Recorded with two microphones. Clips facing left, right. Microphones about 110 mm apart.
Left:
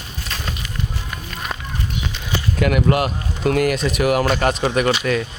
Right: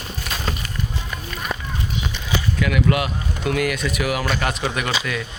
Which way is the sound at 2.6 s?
45° left (ahead or behind).